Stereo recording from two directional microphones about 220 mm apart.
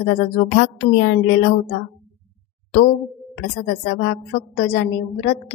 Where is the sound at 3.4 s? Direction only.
50° left (ahead or behind).